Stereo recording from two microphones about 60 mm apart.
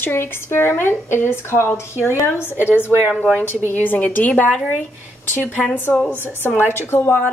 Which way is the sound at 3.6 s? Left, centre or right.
Left.